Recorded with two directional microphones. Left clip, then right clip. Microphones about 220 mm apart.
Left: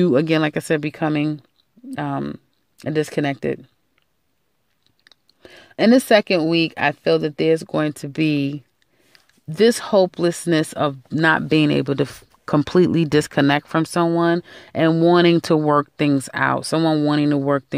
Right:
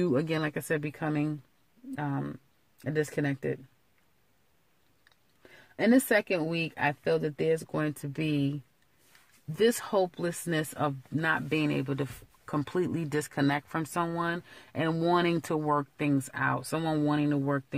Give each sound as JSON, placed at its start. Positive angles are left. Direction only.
{"t": 0.0, "sound": "speech", "side_deg": 35}
{"t": 5.0, "sound": "speech", "side_deg": 45}
{"t": 9.6, "sound": "speech", "side_deg": 35}